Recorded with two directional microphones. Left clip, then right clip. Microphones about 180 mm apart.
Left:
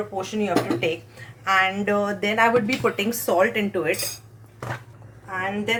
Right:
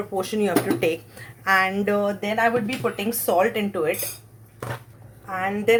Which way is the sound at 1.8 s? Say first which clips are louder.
Even; 20° right (ahead or behind).